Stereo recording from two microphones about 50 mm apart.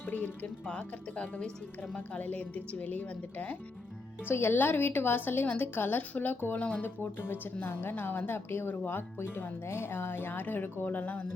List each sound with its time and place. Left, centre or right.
0.0 s speech: left
0.7 s a woman's voice: left
4.3 s speech: left
6.6 s speech: left
7.0 s speech: left